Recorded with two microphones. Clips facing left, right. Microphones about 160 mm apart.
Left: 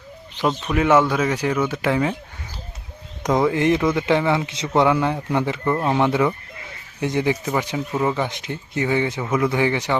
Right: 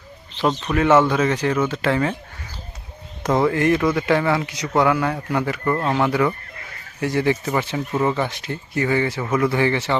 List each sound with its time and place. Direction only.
0.4 s speech: 5° left (ahead or behind)
3.2 s a man's voice: 15° left (ahead or behind)